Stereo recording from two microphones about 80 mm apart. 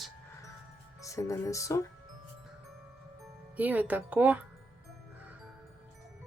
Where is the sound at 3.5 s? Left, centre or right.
Centre.